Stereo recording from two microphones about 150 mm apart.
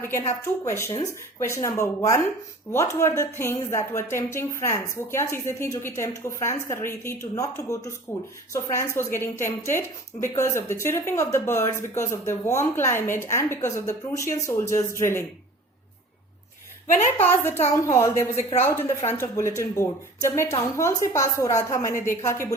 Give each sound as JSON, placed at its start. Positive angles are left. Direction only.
{"t": 0.0, "sound": "a woman's voice", "side_deg": 20}
{"t": 17.2, "sound": "a woman's voice", "side_deg": 15}